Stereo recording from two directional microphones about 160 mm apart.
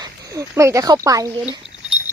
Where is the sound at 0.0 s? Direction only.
20° right (ahead or behind).